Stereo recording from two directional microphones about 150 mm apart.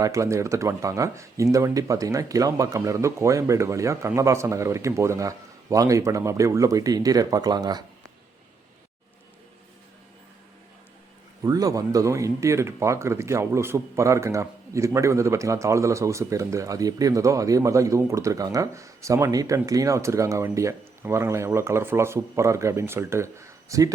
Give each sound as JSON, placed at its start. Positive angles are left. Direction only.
{"t": 0.0, "sound": "speech", "side_deg": -20}
{"t": 11.4, "sound": "speech", "side_deg": -25}